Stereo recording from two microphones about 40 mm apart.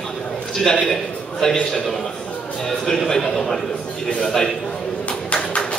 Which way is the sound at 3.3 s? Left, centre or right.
Centre.